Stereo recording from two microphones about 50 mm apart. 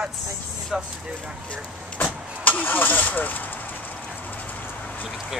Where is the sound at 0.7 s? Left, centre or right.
Centre.